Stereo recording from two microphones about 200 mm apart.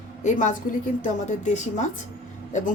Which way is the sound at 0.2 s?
40° left (ahead or behind).